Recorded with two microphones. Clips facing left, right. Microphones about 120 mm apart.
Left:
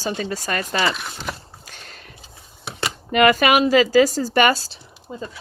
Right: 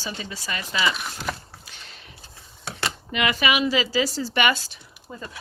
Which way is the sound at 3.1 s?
50° left (ahead or behind).